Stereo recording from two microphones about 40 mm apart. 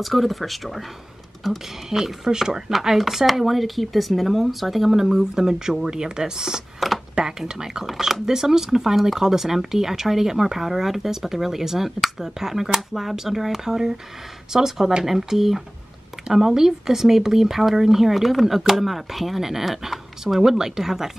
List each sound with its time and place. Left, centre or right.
0.0 s speech: centre
6.8 s a sound: centre
7.2 s speech: centre